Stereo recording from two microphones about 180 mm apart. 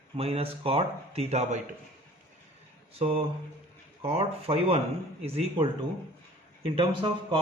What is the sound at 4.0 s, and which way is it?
Speech, 30° right (ahead or behind).